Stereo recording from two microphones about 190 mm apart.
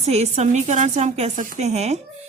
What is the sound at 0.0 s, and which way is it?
A woman's voice, 35° right (ahead or behind).